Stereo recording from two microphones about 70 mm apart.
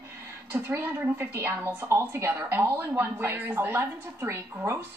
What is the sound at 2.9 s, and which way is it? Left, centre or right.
A woman's voice, right.